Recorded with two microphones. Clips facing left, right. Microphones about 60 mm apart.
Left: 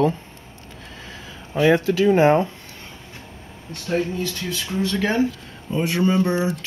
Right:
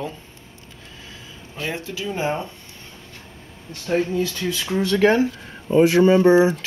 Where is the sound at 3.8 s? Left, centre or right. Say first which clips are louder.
Right 2 dB; centre.